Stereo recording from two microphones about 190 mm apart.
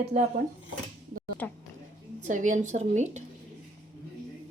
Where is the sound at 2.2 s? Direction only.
40° right (ahead or behind).